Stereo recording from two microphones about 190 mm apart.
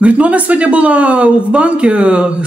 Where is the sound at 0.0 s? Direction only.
5° right (ahead or behind).